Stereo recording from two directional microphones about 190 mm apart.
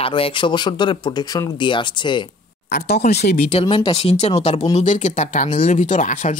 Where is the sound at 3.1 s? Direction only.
60° left (ahead or behind).